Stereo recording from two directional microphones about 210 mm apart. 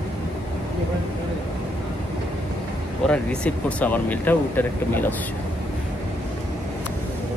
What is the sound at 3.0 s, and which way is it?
Speech, 5° left (ahead or behind).